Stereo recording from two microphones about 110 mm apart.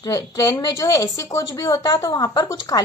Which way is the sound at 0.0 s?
30° left (ahead or behind).